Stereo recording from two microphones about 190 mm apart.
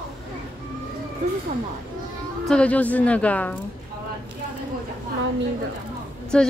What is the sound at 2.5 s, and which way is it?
A woman's voice, 5° left (ahead or behind).